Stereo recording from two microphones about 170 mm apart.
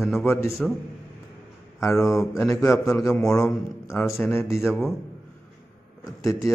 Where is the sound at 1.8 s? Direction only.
20° left (ahead or behind).